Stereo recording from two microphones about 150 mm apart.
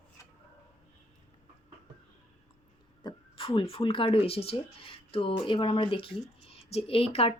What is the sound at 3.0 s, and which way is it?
Speech, 35° left (ahead or behind).